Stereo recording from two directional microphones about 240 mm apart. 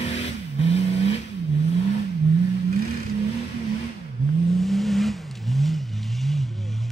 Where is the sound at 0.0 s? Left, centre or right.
Left.